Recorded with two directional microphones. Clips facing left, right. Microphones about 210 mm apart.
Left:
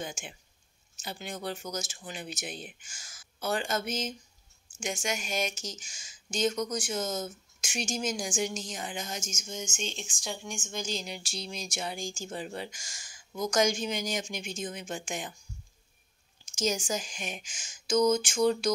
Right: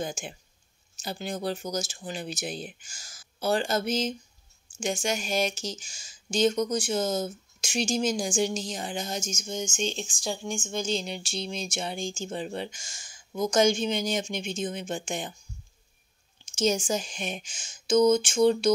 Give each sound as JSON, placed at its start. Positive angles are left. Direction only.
{"t": 0.0, "sound": "speech", "side_deg": -35}
{"t": 16.5, "sound": "speech", "side_deg": -25}